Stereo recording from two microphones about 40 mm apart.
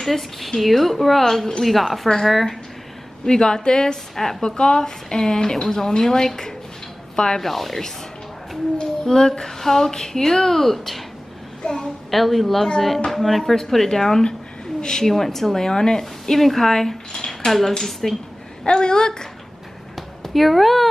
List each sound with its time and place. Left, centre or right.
0.0 s a woman's voice: centre
3.3 s a woman's voice: centre
4.5 s a woman's voice: left
7.4 s speech: centre
9.0 s a woman's voice: centre
11.6 s a child's voice: left
12.1 s a woman's voice: centre
15.0 s a woman's voice: centre
17.5 s a woman's voice: centre
18.6 s a woman's voice: centre
20.0 s a sound: centre